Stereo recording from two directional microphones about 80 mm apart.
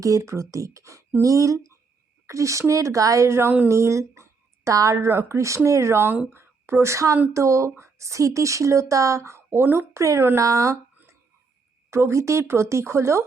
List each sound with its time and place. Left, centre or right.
0.0 s a woman's voice: right
9.5 s speech: right
11.9 s speech: right